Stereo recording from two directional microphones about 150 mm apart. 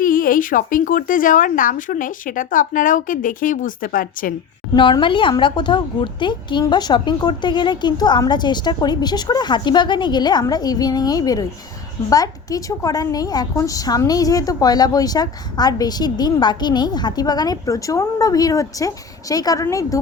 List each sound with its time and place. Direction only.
0.0 s speech: 70° left (ahead or behind)
4.7 s a woman's voice: 35° left (ahead or behind)